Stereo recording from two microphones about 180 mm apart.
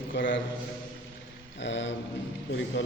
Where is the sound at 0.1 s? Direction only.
85° left.